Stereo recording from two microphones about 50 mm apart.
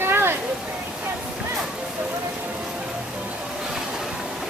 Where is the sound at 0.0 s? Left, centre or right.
Right.